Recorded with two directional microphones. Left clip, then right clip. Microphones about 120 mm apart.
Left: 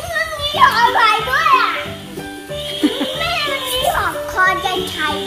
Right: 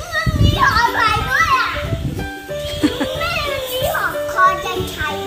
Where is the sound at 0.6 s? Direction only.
35° left (ahead or behind).